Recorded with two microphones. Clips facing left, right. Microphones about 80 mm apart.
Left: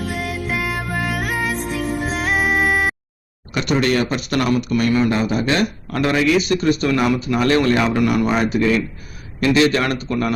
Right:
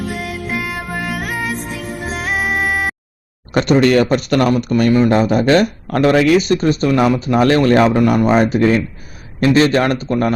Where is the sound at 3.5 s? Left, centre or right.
Right.